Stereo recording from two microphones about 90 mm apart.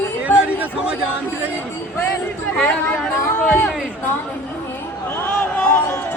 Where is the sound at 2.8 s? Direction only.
15° left (ahead or behind).